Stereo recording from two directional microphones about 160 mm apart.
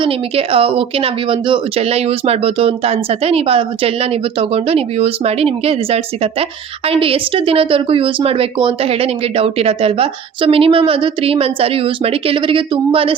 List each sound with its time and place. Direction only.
0.0 s speech: 35° right (ahead or behind)